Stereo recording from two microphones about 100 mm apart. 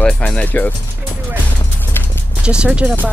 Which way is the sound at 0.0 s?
10° left (ahead or behind).